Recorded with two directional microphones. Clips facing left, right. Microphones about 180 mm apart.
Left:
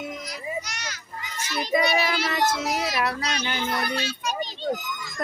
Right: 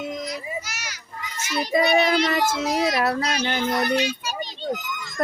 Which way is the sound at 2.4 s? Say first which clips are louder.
Right 3 dB; 5° right (ahead or behind).